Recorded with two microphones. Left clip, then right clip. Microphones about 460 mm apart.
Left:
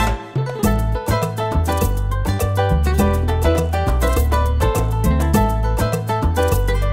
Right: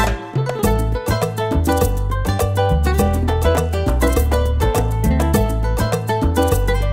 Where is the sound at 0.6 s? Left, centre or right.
Right.